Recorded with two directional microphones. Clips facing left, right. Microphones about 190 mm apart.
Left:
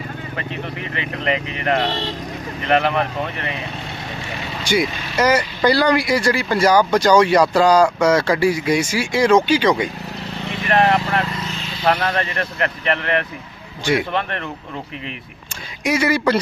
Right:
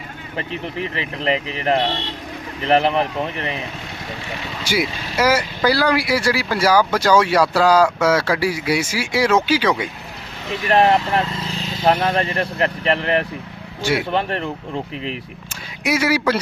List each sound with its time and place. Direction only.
0.3 s speech: 30° right (ahead or behind)
4.6 s speech: 5° right (ahead or behind)
10.7 s speech: 25° right (ahead or behind)
11.9 s speech: 25° right (ahead or behind)
15.8 s speech: 10° right (ahead or behind)